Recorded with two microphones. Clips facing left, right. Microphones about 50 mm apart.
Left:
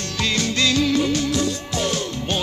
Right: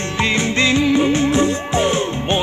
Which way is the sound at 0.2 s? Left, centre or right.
Right.